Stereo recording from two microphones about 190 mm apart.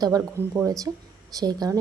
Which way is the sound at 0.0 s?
20° right (ahead or behind).